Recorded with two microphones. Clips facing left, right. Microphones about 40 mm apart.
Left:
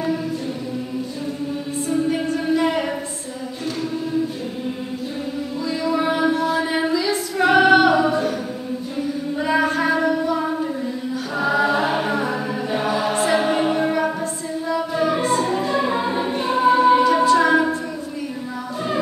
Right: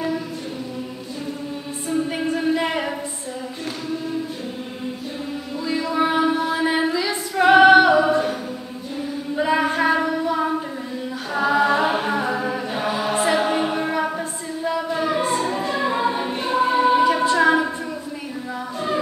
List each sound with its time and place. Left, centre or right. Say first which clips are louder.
2.0 s music: left 1 dB; centre
5.9 s music: even; centre
6.3 s a sound: left 1 dB; right
6.7 s female singing: left 1 dB; centre
7.9 s a capella: right 1 dB; centre
9.4 s a sound: right 1 dB; centre
11.4 s choir: right 1 dB; centre
12.0 s a capella: even; centre
13.3 s music: left 2 dB; centre
15.0 s music: left 4 dB; centre
16.5 s choir: left 3 dB; centre
17.0 s a capella: left 1 dB; centre